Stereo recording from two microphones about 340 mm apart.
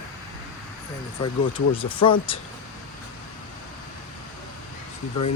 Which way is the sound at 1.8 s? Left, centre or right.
Centre.